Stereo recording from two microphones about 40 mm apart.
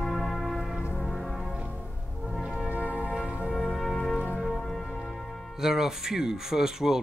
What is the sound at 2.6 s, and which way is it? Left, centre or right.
Music, right.